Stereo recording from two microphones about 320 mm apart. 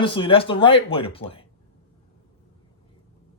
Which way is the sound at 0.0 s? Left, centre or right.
Centre.